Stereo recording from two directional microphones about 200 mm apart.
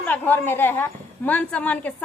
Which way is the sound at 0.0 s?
10° left (ahead or behind).